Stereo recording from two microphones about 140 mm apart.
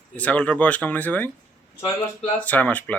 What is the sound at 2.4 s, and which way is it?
Speech, 10° left (ahead or behind).